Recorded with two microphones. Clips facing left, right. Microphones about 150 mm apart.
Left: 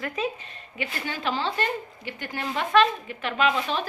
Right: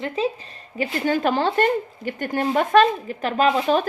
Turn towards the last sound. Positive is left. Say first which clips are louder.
# right 6 dB
turn(degrees=-40)  # may be behind; listen again after turning